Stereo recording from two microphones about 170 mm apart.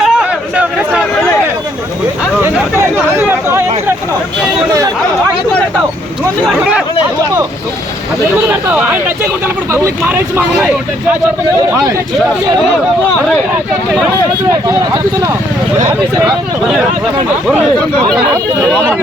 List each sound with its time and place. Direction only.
0.0 s a sound: 5° right (ahead or behind)
2.4 s chatter: 15° right (ahead or behind)
8.4 s speech: 10° right (ahead or behind)
14.5 s speech: 20° right (ahead or behind)
18.7 s speech: 5° left (ahead or behind)